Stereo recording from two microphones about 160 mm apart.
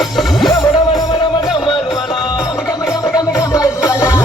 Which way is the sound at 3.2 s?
20° left (ahead or behind).